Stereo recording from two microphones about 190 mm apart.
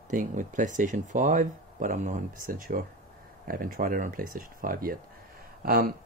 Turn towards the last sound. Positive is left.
turn(degrees=-50)  # may be behind; listen again after turning